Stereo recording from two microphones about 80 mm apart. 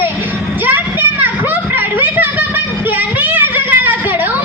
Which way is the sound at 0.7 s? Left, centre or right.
Right.